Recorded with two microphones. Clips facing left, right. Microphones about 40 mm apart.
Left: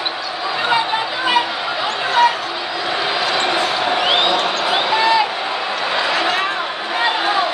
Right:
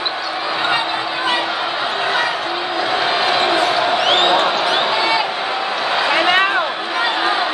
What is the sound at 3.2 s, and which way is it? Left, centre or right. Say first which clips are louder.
Basketball bounce: right 2 dB; centre.